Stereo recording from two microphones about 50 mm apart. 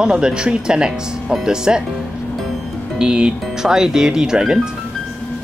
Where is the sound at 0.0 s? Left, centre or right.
Centre.